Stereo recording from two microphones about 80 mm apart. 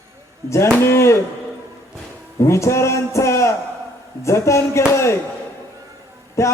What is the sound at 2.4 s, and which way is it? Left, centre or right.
Speech, left.